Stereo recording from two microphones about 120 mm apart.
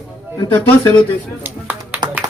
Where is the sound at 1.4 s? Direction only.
15° right (ahead or behind).